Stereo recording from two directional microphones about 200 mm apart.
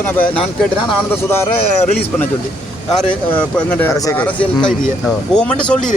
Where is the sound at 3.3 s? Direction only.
10° left (ahead or behind).